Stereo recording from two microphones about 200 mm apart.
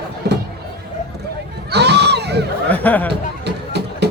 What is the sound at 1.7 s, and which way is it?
Crowd, 55° right (ahead or behind).